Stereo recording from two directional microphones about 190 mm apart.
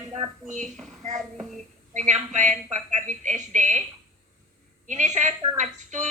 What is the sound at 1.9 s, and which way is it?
A woman's voice, 40° right (ahead or behind).